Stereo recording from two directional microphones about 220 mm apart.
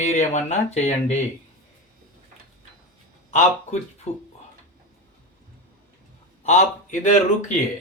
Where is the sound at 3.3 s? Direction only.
30° left (ahead or behind).